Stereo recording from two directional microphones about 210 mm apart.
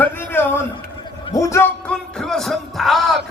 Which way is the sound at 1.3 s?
15° left (ahead or behind).